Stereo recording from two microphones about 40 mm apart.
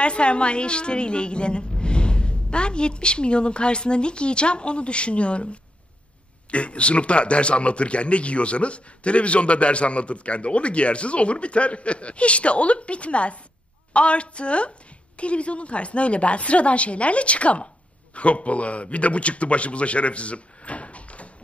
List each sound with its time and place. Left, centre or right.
0.0 s a woman's voice: left